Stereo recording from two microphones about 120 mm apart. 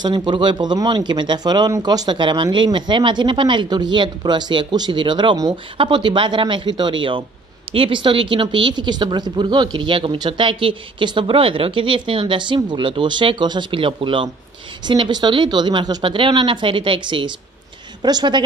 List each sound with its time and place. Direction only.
0.0 s speech: 40° right (ahead or behind)